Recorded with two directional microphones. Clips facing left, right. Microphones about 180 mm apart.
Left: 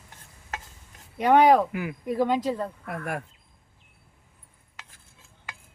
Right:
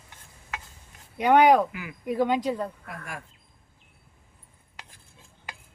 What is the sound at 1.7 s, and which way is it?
Speech, 50° left (ahead or behind).